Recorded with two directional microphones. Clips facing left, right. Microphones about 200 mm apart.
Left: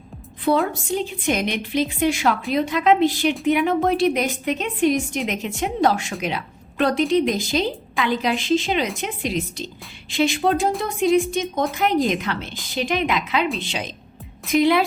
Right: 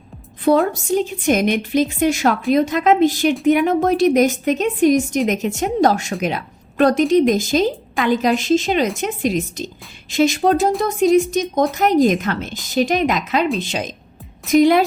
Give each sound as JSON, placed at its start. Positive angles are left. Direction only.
{"t": 0.4, "sound": "a woman's voice", "side_deg": -45}